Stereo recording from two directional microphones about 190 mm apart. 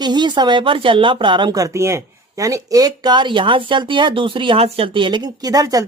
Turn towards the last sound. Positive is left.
turn(degrees=-20)  # may be behind; listen again after turning